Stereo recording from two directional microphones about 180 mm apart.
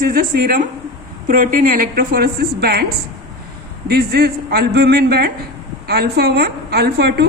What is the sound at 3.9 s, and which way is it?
A woman's voice, 60° right (ahead or behind).